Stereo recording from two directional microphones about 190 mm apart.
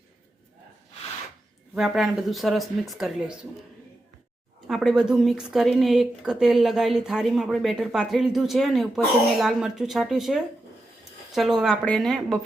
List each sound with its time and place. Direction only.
1.7 s speech: centre (ahead or behind)
4.7 s speech: centre (ahead or behind)